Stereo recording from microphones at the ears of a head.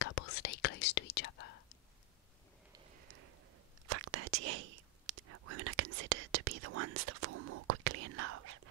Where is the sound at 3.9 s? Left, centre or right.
Right.